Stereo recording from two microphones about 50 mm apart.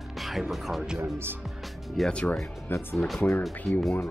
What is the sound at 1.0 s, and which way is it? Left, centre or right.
Speech, right.